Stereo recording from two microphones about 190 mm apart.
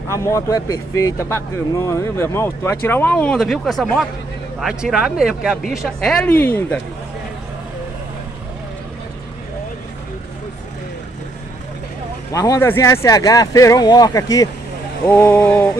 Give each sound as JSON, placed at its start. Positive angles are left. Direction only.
{"t": 0.1, "sound": "speech", "side_deg": 15}
{"t": 12.3, "sound": "speech", "side_deg": 15}